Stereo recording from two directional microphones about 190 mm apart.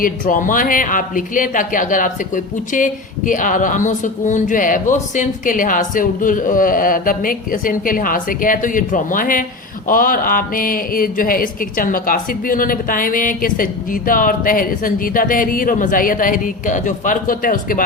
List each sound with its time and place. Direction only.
0.0 s speech: 45° left (ahead or behind)